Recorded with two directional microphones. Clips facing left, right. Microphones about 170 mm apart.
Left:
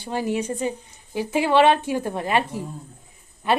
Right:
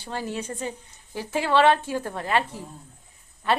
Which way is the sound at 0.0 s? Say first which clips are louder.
Left 6 dB; 15° left (ahead or behind).